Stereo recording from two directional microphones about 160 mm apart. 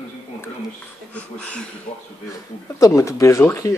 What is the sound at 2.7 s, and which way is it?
Speech, 20° left (ahead or behind).